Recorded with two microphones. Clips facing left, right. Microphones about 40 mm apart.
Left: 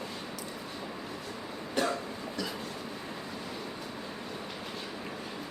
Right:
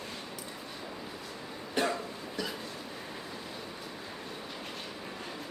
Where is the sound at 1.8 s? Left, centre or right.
Right.